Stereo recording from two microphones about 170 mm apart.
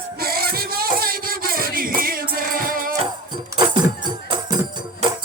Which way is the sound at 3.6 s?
25° right (ahead or behind).